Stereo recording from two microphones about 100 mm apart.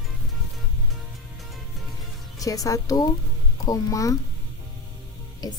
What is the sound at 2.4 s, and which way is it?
Speech, 35° left (ahead or behind).